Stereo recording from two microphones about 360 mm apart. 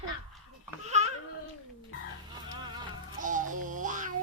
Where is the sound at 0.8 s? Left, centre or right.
Centre.